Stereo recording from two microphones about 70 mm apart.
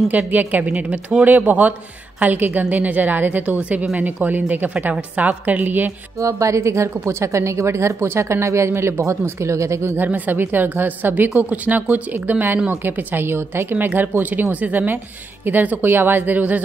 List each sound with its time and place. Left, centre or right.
0.1 s a woman's voice: right
6.2 s speech: right
9.9 s a woman's voice: right